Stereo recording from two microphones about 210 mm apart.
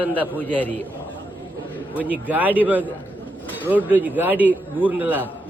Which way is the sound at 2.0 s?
5° right (ahead or behind).